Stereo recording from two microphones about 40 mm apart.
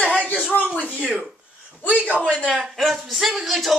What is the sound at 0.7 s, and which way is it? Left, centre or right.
Speech, left.